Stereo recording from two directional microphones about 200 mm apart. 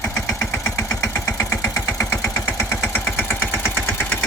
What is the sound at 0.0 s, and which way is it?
Engine, 15° left (ahead or behind).